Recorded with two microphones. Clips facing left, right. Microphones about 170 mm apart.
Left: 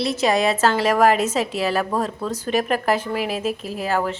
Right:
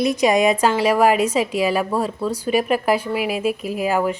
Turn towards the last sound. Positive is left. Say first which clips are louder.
# right 3 dB
turn(degrees=-10)  # may be behind; listen again after turning